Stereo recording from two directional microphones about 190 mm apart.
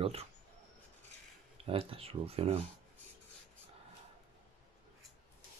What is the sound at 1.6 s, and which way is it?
Speech, 30° right (ahead or behind).